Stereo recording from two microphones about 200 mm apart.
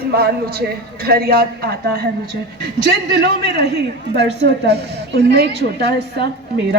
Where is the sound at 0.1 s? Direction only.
50° right (ahead or behind).